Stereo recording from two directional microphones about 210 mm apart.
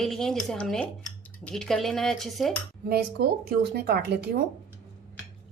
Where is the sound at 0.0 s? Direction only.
Centre (ahead or behind).